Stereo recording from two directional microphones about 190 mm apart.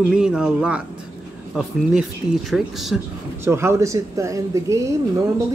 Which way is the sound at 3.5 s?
15° right (ahead or behind).